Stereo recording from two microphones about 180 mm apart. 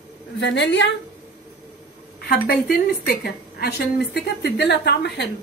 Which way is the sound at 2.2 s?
60° left (ahead or behind).